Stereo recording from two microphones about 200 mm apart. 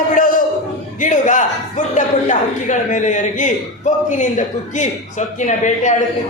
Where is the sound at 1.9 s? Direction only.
40° left (ahead or behind).